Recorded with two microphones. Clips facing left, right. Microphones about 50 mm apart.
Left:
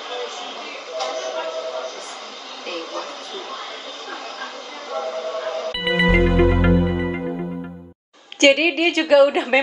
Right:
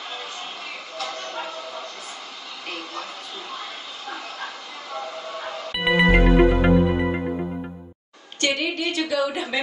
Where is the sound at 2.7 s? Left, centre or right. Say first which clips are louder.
Left 5 dB; centre.